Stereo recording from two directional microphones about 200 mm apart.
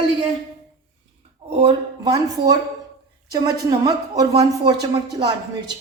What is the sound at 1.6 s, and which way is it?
Speech, 20° right (ahead or behind).